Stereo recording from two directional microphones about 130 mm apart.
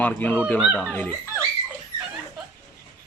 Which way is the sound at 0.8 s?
10° left (ahead or behind).